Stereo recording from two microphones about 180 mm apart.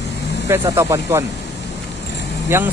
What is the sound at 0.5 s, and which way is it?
Speech, 15° right (ahead or behind).